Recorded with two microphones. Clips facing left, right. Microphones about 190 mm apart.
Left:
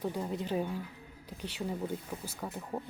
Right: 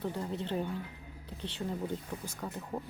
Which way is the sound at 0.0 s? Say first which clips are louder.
Left 1 dB; 10° left (ahead or behind).